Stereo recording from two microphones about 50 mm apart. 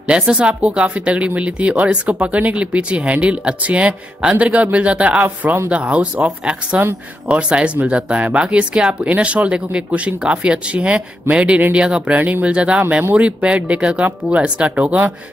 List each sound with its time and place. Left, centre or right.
0.1 s speech: right
12.2 s speech: right